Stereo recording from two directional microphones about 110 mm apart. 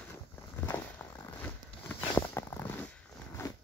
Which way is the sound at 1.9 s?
20° left (ahead or behind).